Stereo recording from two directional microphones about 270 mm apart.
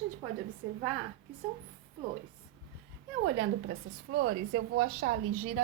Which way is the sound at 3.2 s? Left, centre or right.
Right.